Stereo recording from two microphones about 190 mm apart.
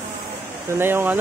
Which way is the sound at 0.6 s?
10° right (ahead or behind).